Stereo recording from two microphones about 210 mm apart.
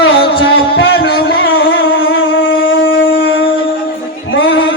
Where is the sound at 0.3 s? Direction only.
55° left (ahead or behind).